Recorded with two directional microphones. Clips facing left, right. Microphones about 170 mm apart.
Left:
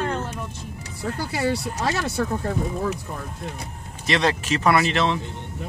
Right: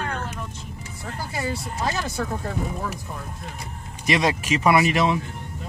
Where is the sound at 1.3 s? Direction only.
75° left (ahead or behind).